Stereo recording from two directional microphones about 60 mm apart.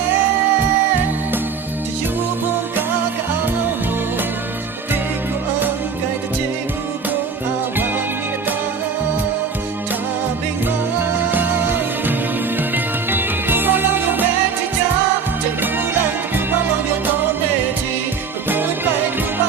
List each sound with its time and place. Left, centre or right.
11.3 s music: right
18.4 s music: right